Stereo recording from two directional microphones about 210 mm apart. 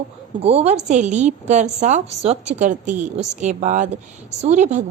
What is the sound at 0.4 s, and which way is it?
A woman's voice, 30° right (ahead or behind).